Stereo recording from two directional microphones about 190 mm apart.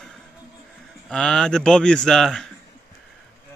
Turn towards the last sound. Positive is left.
turn(degrees=0)  # may be behind; listen again after turning